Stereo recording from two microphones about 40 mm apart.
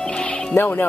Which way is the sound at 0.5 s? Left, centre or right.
Left.